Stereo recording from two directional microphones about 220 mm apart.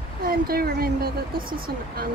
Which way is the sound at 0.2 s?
40° right (ahead or behind).